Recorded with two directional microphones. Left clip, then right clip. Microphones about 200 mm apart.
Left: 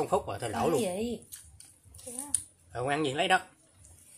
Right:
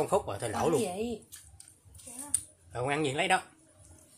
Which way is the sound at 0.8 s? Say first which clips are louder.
Left 1 dB; 25° left (ahead or behind).